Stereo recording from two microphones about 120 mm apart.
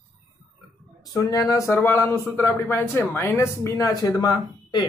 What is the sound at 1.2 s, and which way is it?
Speech, 30° left (ahead or behind).